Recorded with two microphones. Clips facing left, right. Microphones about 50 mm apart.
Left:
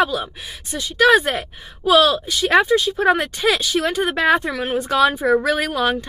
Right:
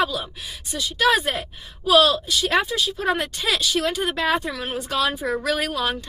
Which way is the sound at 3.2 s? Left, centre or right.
Centre.